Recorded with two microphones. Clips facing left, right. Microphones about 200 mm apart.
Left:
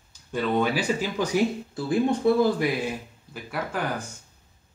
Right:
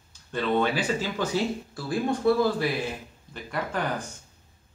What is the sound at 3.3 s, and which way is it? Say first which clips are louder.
Speech: even; 5° left (ahead or behind).